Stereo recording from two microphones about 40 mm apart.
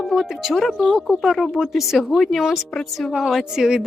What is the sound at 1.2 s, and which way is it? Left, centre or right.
A woman's voice, centre.